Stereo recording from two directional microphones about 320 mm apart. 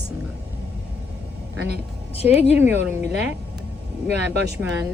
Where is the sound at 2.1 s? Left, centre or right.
Centre.